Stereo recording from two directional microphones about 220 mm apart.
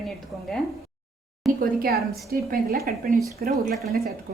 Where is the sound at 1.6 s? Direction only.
45° right (ahead or behind).